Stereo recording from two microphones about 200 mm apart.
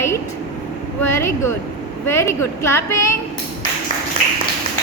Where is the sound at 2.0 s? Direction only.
15° left (ahead or behind).